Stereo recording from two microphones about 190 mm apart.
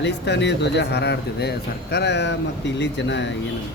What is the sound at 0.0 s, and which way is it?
Speech, 65° left (ahead or behind).